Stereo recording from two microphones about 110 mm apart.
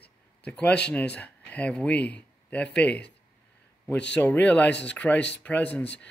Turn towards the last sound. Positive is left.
turn(degrees=10)  # may be behind; listen again after turning